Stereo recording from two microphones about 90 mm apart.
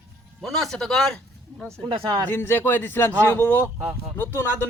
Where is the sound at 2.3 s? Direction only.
25° left (ahead or behind).